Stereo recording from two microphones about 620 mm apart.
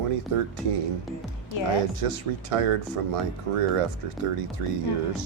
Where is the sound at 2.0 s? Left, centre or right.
Right.